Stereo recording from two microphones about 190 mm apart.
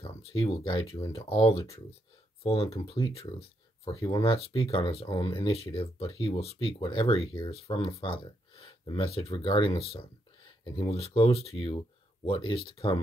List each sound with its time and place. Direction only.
0.2 s speech: 30° left (ahead or behind)